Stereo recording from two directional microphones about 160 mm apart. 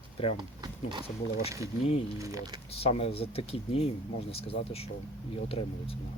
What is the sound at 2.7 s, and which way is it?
Speech, 40° left (ahead or behind).